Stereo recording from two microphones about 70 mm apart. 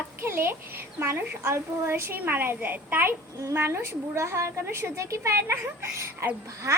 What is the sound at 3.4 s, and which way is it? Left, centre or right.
A woman's voice, right.